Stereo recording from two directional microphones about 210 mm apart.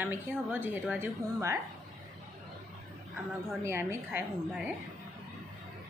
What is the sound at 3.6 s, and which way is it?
A woman's voice, 10° right (ahead or behind).